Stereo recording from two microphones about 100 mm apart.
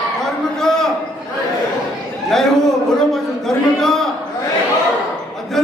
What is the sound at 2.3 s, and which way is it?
Speech, 5° left (ahead or behind).